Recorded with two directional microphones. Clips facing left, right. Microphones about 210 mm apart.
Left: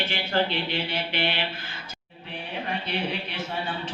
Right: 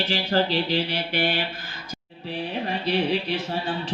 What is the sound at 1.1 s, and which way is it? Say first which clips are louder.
Mantra: right 5 dB; 45° right (ahead or behind).